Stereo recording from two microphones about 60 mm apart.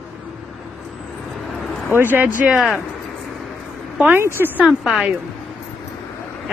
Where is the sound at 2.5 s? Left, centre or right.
Centre.